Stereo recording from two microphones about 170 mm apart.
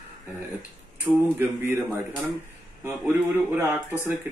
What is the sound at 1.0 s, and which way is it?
Speech, 15° right (ahead or behind).